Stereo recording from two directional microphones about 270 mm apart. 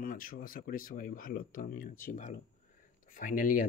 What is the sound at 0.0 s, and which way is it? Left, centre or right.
Speech, left.